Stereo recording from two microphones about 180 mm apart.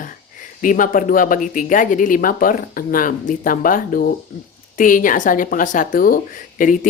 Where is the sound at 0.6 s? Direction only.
50° left (ahead or behind).